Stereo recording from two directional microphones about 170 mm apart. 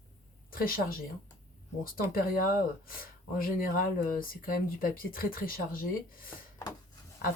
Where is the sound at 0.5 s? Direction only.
55° left (ahead or behind).